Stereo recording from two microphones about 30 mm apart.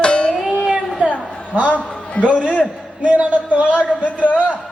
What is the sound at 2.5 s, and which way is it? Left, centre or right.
Speech, left.